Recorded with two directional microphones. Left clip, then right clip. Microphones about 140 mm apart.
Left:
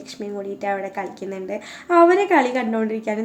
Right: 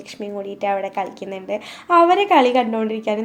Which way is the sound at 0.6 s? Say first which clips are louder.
Right 4 dB; 10° right (ahead or behind).